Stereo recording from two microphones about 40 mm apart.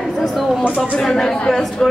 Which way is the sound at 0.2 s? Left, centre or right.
Centre.